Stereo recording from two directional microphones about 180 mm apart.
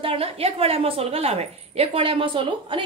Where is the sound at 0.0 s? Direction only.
35° right (ahead or behind).